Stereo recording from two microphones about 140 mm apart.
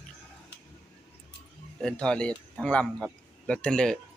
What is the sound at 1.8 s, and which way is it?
Speech, 5° left (ahead or behind).